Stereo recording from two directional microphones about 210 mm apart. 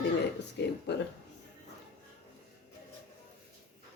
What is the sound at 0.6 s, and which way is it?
Speech, 55° left (ahead or behind).